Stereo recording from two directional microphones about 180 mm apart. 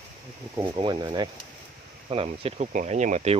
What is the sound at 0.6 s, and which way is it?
Speech, 25° right (ahead or behind).